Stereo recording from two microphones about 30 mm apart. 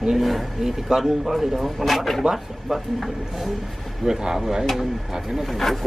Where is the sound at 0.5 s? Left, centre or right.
Centre.